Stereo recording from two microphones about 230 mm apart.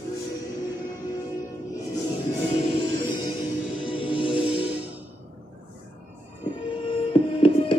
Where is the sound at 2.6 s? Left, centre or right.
Left.